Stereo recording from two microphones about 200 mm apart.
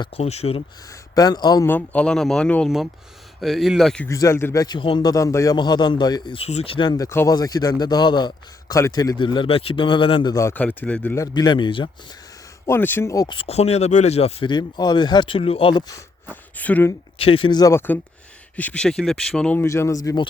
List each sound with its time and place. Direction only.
0.0 s a man's voice: 30° left (ahead or behind)
0.9 s a man's voice: 20° left (ahead or behind); by 4.1 s 5° left (ahead or behind)
4.1 s a man's voice: 15° left (ahead or behind)
12.6 s a man's voice: 10° left (ahead or behind)
16.3 s speech: 10° left (ahead or behind)
17.2 s a man's voice: 30° left (ahead or behind)